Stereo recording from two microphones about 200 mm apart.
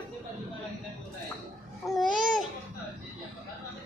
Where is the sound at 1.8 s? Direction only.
Centre (ahead or behind).